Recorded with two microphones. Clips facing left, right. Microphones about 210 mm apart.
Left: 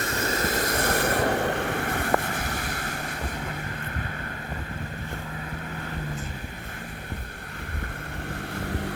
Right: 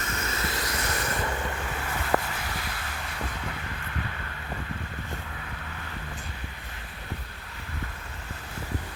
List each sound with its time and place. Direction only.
0.0 s vehicle: 35° left (ahead or behind)